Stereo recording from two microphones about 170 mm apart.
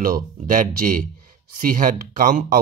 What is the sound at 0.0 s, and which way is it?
Speech, 50° right (ahead or behind).